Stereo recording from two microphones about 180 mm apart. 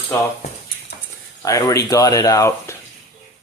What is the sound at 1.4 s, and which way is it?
Speech, 20° left (ahead or behind).